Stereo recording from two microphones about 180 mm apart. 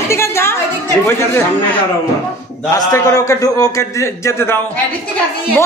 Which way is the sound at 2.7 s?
20° left (ahead or behind).